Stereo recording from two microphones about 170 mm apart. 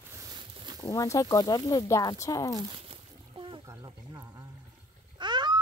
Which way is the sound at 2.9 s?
30° right (ahead or behind).